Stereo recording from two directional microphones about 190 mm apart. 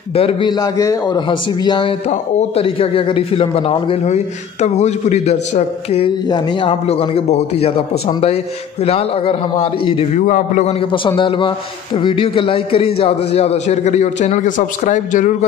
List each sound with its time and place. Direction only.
0.1 s a man's voice: 30° left (ahead or behind)
6.2 s a man's voice: 25° left (ahead or behind)
10.2 s a man's voice: 40° left (ahead or behind)
10.9 s a man's voice: 25° left (ahead or behind); by 15.3 s 40° left (ahead or behind)